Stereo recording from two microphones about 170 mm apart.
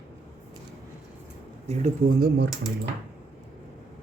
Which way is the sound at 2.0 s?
65° right (ahead or behind).